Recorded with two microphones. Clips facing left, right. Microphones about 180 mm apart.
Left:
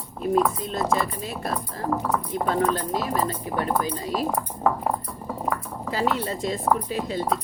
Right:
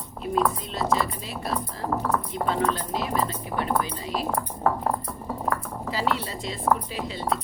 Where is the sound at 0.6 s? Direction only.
50° left (ahead or behind).